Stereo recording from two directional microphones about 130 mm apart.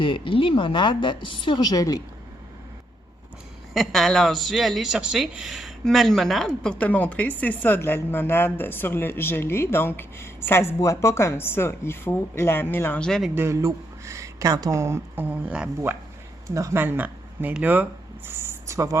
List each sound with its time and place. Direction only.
0.0 s a woman's voice: 40° left (ahead or behind)
3.8 s speech: centre (ahead or behind)
13.1 s speech: centre (ahead or behind)
13.3 s speech: 20° right (ahead or behind)
16.6 s speech: 20° right (ahead or behind)